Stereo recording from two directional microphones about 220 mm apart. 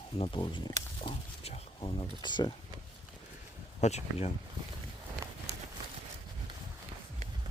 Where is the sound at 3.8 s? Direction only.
30° left (ahead or behind).